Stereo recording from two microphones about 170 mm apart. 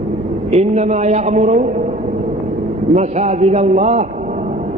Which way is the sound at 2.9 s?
40° right (ahead or behind).